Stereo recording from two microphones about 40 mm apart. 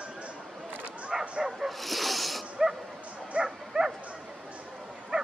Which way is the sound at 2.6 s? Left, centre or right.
Centre.